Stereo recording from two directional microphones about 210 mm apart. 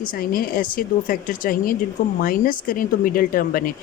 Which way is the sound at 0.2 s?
40° left (ahead or behind).